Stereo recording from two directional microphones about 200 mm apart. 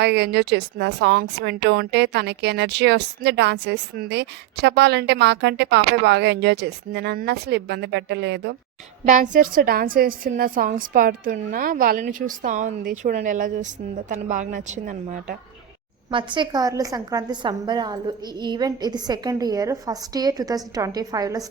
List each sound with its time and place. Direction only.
0.0 s speech: 55° right (ahead or behind)
9.0 s a woman's voice: 40° right (ahead or behind)
16.1 s a woman's voice: 25° right (ahead or behind)